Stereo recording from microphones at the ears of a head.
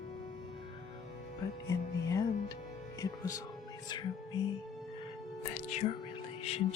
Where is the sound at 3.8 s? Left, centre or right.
Left.